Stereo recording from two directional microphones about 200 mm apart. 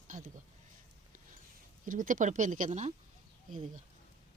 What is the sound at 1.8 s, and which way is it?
Speech, 40° right (ahead or behind).